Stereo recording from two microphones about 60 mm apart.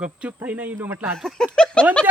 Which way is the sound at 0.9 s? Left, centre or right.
Right.